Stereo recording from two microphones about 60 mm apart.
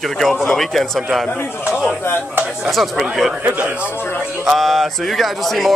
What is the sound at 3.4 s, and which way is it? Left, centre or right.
Speech, right.